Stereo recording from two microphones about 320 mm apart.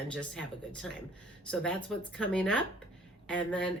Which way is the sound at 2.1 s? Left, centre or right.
Centre.